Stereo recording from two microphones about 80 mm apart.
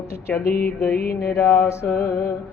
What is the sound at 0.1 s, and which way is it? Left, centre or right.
Mantra, left.